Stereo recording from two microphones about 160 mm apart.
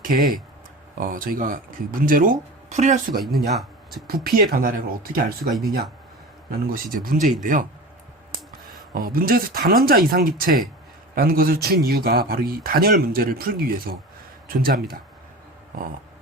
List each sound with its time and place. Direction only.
0.0 s speech: 65° right (ahead or behind)
3.3 s speech: centre (ahead or behind)
4.0 s speech: 65° right (ahead or behind)
6.5 s speech: 65° right (ahead or behind)
8.9 s speech: 65° right (ahead or behind)